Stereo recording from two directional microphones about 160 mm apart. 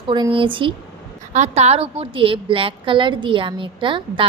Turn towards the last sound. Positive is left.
turn(degrees=-30)  # may be behind; listen again after turning